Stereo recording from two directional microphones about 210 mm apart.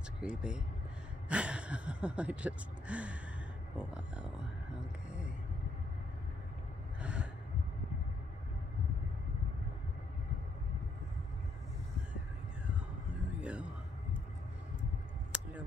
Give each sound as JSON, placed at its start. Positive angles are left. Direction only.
{"t": 0.2, "sound": "speech", "side_deg": -5}
{"t": 7.0, "sound": "gasp", "side_deg": -5}
{"t": 13.4, "sound": "a sound", "side_deg": -5}